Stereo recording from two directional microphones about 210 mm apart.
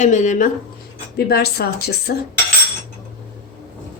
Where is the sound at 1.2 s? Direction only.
50° left (ahead or behind).